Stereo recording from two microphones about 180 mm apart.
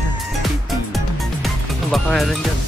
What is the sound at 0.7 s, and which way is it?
Music, centre (ahead or behind).